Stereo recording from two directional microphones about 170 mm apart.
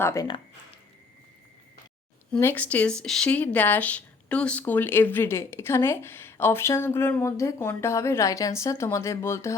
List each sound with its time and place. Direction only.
0.0 s speech: 20° left (ahead or behind)
2.3 s speech: 10° left (ahead or behind)